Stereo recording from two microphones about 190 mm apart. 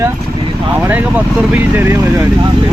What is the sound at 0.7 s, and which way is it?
Speech, 10° right (ahead or behind).